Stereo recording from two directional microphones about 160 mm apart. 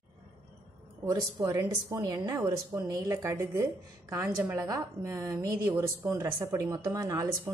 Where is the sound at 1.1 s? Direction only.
20° right (ahead or behind).